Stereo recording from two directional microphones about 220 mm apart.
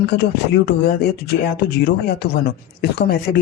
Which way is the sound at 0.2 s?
50° left (ahead or behind).